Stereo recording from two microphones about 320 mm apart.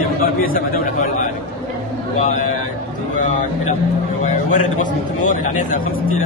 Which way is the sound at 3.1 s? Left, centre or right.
Left.